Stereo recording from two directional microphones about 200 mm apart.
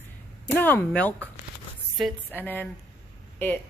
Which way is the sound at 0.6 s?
10° left (ahead or behind).